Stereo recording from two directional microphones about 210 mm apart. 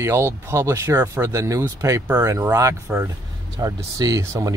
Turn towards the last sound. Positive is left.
turn(degrees=-15)  # may be behind; listen again after turning